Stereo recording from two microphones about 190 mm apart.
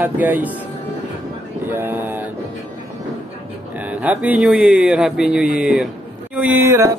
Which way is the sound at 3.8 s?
10° right (ahead or behind).